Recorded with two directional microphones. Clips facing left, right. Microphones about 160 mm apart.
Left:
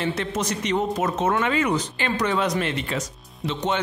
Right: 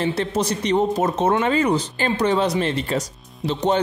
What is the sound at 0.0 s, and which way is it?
A man's voice, 35° right (ahead or behind).